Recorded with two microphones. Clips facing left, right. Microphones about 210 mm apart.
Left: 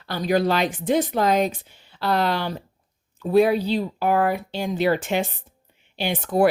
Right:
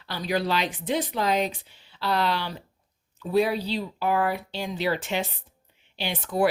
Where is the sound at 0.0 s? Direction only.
50° left (ahead or behind).